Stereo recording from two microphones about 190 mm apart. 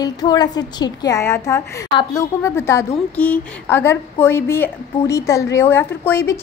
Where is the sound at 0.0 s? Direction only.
20° left (ahead or behind).